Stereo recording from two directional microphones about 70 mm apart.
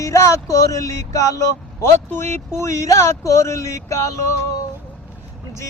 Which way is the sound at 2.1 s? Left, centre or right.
Left.